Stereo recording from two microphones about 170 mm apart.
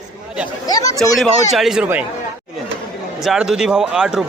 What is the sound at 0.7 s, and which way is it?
Speech, 20° left (ahead or behind).